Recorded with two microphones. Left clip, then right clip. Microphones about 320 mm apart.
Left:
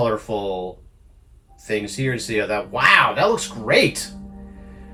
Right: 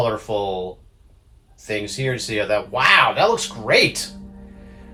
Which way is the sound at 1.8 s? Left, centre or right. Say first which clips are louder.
Right 1 dB; right.